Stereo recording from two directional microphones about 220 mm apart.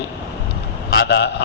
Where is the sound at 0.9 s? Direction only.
50° left (ahead or behind).